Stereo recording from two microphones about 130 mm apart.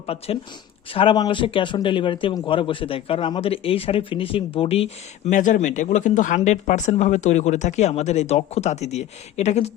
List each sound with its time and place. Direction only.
0.1 s speech: 50° left (ahead or behind)
0.9 s speech: 35° left (ahead or behind)
5.3 s speech: 75° left (ahead or behind); by 9.7 s 60° left (ahead or behind)